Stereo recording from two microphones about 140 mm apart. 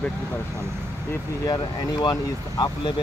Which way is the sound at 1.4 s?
30° left (ahead or behind).